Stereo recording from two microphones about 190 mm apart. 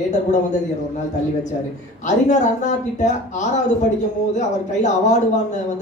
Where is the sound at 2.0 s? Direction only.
40° left (ahead or behind).